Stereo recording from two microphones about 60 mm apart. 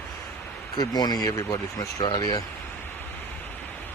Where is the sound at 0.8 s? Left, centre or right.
Left.